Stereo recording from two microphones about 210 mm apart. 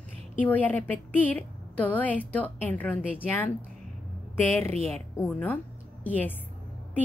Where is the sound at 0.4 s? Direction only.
10° left (ahead or behind).